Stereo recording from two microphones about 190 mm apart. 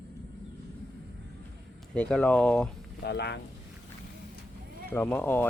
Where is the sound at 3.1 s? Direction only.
65° left (ahead or behind).